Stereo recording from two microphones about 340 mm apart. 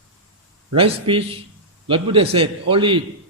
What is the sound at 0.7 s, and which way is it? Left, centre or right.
A man's voice, centre.